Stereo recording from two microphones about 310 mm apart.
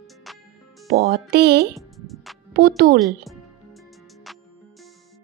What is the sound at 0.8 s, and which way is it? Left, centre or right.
Speech, right.